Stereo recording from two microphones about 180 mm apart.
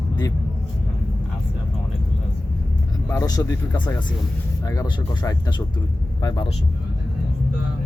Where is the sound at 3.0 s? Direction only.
15° left (ahead or behind).